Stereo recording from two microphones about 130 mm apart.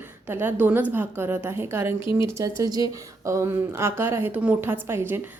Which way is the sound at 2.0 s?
40° left (ahead or behind).